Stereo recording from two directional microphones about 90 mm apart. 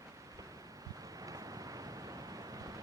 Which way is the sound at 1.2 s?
40° right (ahead or behind).